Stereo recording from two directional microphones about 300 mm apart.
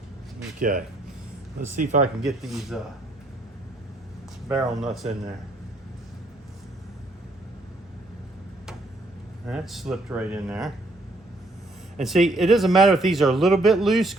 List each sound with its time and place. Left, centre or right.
0.6 s speech: right
2.2 s speech: centre
4.4 s speech: centre
9.5 s speech: centre
12.0 s speech: centre